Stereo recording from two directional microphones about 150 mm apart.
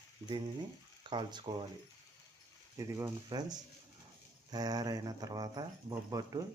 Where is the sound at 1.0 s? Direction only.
30° right (ahead or behind).